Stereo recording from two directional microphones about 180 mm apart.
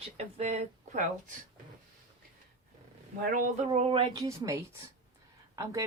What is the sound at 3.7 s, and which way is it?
Speech, 30° right (ahead or behind).